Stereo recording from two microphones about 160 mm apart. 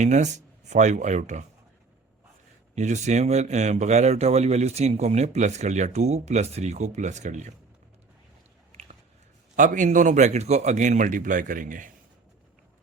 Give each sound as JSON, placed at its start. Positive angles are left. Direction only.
{"t": 0.0, "sound": "a man's voice", "side_deg": -50}
{"t": 2.7, "sound": "a man's voice", "side_deg": -45}
{"t": 8.7, "sound": "a sound", "side_deg": -40}
{"t": 9.6, "sound": "a man's voice", "side_deg": -55}